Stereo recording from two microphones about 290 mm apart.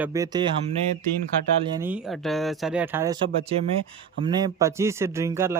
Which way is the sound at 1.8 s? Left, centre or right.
Centre.